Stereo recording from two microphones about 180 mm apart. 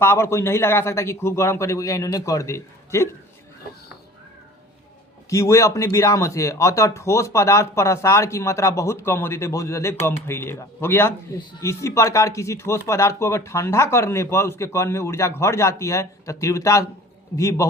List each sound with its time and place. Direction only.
0.0 s speech: 15° left (ahead or behind)
5.3 s speech: 15° left (ahead or behind)